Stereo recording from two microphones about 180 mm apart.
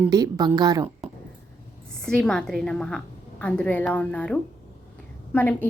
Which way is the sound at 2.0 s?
5° left (ahead or behind).